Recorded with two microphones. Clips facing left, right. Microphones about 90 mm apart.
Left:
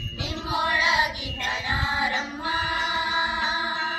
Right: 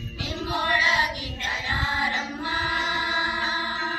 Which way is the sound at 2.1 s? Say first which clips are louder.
Left 1 dB; 5° left (ahead or behind).